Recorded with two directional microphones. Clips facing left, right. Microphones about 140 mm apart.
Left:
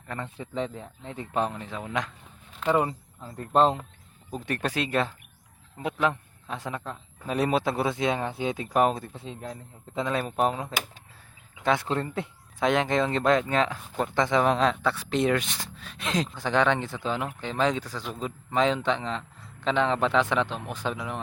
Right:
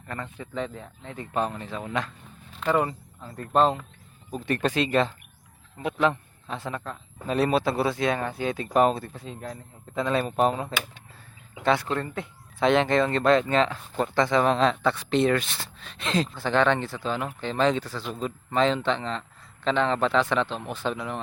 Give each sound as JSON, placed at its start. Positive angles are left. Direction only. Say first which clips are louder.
{"t": 0.3, "sound": "a man's voice", "louder": "left 1 dB", "side_deg": 30}
{"t": 4.4, "sound": "speech", "louder": "right 4 dB", "side_deg": 10}
{"t": 8.6, "sound": "a man's voice", "louder": "right 3 dB", "side_deg": 10}
{"t": 10.1, "sound": "speech", "louder": "right 3 dB", "side_deg": 10}
{"t": 11.9, "sound": "a man's voice", "louder": "left 1 dB", "side_deg": 30}
{"t": 12.5, "sound": "speech", "louder": "right 3 dB", "side_deg": 10}